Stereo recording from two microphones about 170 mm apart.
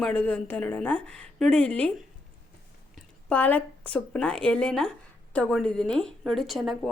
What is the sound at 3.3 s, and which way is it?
A woman's voice, 10° left (ahead or behind).